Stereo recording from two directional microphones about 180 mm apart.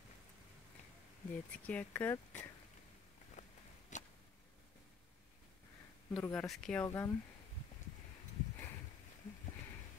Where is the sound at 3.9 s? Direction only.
40° left (ahead or behind).